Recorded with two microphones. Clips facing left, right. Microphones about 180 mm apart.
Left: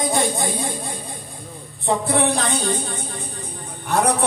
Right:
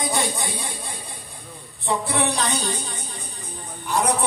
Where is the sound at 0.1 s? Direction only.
50° left (ahead or behind).